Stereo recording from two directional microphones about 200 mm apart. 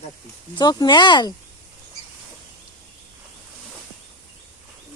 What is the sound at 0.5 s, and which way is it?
Speech, 20° left (ahead or behind).